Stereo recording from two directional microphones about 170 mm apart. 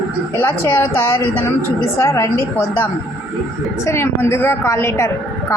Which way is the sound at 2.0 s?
15° left (ahead or behind).